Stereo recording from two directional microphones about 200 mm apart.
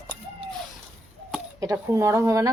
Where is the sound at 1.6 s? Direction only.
15° right (ahead or behind).